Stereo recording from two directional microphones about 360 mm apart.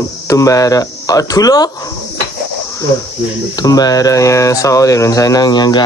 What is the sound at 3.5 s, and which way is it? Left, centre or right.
Speech, centre.